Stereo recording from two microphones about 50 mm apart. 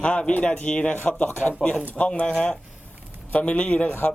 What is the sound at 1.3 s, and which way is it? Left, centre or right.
Speech, left.